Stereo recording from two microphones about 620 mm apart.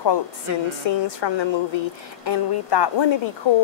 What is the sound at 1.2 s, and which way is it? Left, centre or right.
A woman's voice, left.